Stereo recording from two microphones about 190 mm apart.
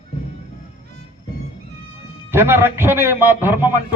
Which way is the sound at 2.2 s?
10° right (ahead or behind).